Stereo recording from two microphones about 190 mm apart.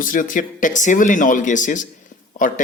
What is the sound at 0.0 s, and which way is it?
Speech, 45° left (ahead or behind).